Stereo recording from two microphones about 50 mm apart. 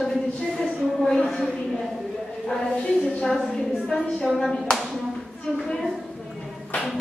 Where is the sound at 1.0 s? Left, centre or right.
Centre.